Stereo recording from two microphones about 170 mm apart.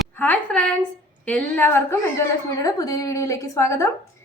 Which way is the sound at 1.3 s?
10° left (ahead or behind).